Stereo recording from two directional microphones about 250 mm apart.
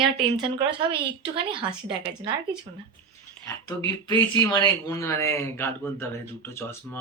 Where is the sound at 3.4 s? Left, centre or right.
Centre.